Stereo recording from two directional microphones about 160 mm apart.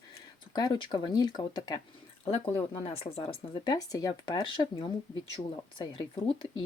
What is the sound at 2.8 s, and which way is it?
Speech, 40° left (ahead or behind).